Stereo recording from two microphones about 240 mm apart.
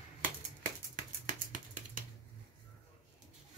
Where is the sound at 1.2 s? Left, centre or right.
Right.